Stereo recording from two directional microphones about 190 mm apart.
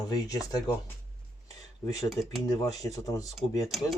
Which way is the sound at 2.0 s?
Centre (ahead or behind).